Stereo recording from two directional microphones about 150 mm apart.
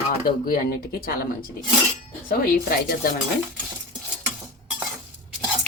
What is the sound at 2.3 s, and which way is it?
Speech, 80° left.